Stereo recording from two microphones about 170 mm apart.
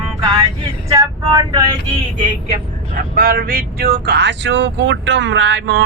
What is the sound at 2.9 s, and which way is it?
Speech, 55° right (ahead or behind).